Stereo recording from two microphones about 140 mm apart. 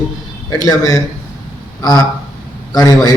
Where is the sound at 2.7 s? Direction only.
30° left (ahead or behind).